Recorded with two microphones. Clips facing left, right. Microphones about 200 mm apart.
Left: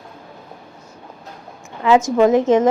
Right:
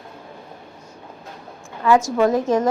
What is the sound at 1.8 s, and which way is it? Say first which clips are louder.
Speech: left 3 dB; 20° left (ahead or behind).